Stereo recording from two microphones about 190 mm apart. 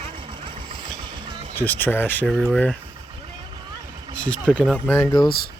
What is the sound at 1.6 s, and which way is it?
Speech, 10° left (ahead or behind).